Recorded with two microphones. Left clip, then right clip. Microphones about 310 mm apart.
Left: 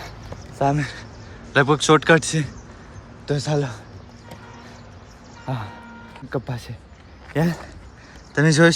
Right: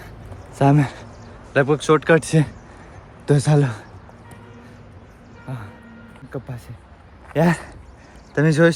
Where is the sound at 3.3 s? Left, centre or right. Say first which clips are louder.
Right 4 dB; centre.